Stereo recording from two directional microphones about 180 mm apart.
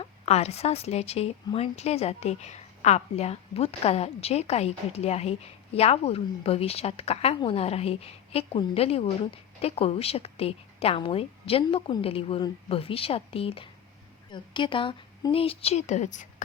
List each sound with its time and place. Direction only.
0.0 s a woman's voice: 35° left (ahead or behind)